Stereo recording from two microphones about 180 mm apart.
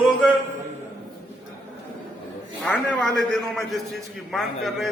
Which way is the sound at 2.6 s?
5° left (ahead or behind).